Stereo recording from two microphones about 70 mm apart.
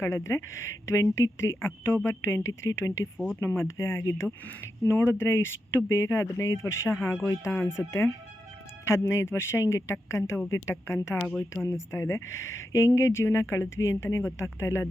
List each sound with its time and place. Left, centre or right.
0.0 s speech: left
11.2 s a woman's voice: centre
11.6 s speech: left